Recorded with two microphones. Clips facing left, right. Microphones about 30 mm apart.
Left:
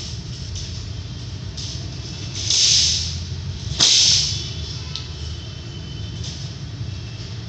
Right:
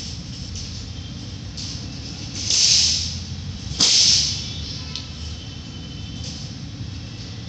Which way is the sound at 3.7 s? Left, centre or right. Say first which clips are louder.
Left 1 dB; left.